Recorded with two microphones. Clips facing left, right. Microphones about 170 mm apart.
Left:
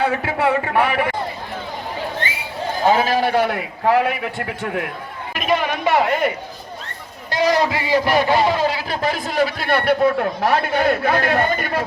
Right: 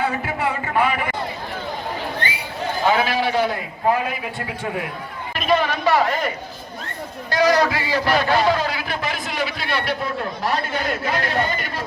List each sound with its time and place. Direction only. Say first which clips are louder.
0.0 s speech: left 4 dB; 75° left (ahead or behind)
2.8 s a man's voice: left 3 dB; 40° left (ahead or behind); by 4.2 s 75° left (ahead or behind)
5.3 s speech: even; 10° left (ahead or behind)
7.3 s a man's voice: even; 25° left (ahead or behind); by 11.8 s 55° left (ahead or behind)